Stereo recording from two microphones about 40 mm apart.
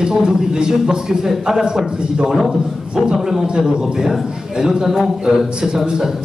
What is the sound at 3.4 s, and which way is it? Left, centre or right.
A man's voice, right.